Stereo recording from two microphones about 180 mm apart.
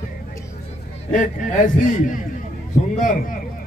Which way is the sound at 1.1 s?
45° left (ahead or behind).